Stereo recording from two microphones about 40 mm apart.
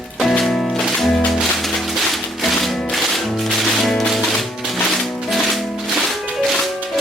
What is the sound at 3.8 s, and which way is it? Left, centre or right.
Music, centre.